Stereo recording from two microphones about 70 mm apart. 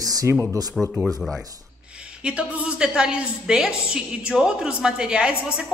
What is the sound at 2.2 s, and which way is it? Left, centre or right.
A woman's voice, centre.